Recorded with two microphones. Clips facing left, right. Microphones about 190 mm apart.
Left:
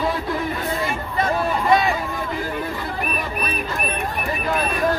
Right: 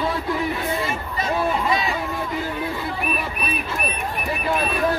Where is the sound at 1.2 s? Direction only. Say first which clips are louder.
Left 1 dB; 50° left (ahead or behind).